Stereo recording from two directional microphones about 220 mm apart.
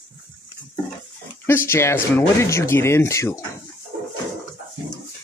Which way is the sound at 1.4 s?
10° left (ahead or behind).